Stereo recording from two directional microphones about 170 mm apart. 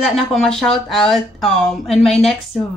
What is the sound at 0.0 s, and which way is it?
Speech, centre (ahead or behind).